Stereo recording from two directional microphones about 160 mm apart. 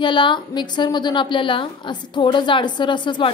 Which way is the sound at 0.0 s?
30° left (ahead or behind).